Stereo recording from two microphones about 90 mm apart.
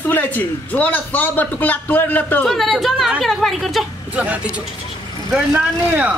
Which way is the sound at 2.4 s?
Centre (ahead or behind).